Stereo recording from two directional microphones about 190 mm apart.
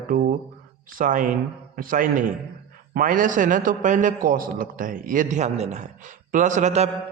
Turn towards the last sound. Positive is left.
turn(degrees=-40)  # may be behind; listen again after turning